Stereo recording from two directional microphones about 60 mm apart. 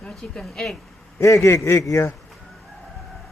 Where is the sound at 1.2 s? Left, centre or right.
Left.